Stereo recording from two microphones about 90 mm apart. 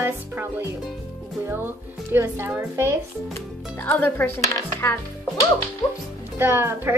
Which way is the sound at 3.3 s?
20° left (ahead or behind).